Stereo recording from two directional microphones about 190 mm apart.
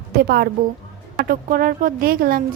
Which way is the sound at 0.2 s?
55° right (ahead or behind).